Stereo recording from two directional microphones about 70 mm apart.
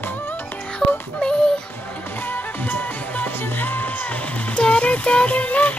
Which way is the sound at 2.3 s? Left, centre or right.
Left.